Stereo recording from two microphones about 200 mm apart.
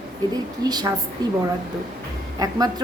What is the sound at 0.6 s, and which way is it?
Speech, 20° right (ahead or behind).